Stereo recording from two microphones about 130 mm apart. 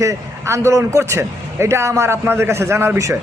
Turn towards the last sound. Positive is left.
turn(degrees=-20)  # may be behind; listen again after turning